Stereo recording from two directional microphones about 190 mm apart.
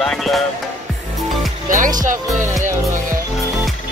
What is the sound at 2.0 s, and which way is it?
Speech, 40° right (ahead or behind).